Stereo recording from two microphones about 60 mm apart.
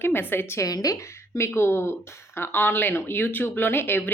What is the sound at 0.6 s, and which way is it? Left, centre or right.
Speech, left.